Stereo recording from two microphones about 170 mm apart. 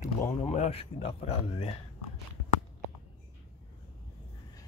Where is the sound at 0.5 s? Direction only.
40° left (ahead or behind).